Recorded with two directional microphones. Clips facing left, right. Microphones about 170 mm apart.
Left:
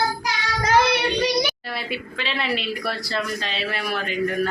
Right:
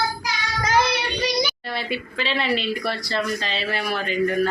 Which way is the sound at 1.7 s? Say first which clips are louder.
Right 2 dB; centre (ahead or behind).